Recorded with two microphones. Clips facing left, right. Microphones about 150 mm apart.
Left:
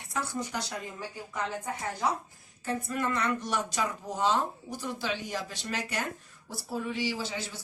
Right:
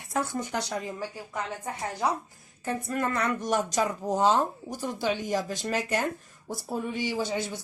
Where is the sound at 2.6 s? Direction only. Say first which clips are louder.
Right 2 dB; 50° right (ahead or behind).